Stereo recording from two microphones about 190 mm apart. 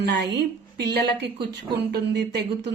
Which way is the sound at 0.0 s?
65° right (ahead or behind).